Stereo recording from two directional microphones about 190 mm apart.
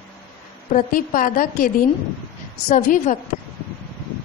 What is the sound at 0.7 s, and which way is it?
A woman's voice, 45° left (ahead or behind).